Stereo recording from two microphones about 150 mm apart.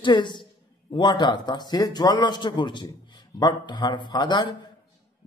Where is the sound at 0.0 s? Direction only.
30° left (ahead or behind).